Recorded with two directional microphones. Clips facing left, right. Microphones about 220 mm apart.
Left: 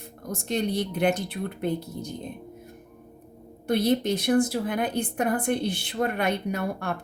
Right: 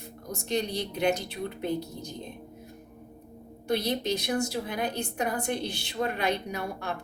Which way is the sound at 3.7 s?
55° left (ahead or behind).